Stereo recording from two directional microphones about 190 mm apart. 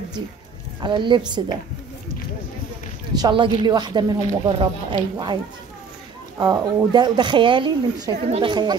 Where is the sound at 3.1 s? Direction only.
25° right (ahead or behind).